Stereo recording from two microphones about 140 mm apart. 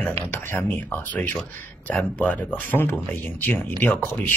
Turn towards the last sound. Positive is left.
turn(degrees=15)  # may be behind; listen again after turning